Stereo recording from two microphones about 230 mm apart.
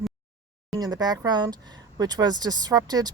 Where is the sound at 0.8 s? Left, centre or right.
Centre.